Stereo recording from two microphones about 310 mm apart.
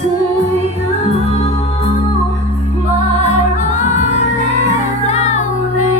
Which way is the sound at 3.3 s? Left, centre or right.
Left.